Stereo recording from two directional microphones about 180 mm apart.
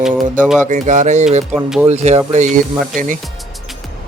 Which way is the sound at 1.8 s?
40° right (ahead or behind).